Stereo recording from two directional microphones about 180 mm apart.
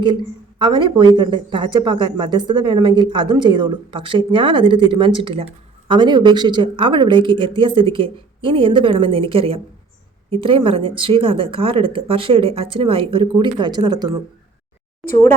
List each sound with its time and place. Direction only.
0.6 s speech: 25° right (ahead or behind)
15.1 s speech: 15° left (ahead or behind)